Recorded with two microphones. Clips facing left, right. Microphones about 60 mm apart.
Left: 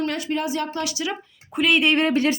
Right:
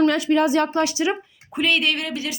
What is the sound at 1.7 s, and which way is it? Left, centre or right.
Speech, left.